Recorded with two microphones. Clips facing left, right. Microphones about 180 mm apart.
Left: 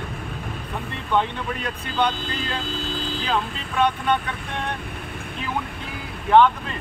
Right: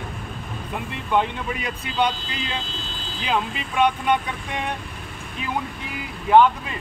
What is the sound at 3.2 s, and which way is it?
Speech, 10° right (ahead or behind).